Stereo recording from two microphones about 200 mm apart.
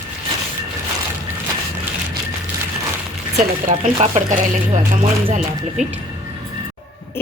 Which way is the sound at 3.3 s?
35° right (ahead or behind).